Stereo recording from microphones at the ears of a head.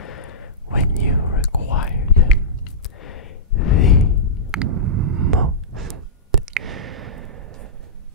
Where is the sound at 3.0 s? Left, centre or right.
Left.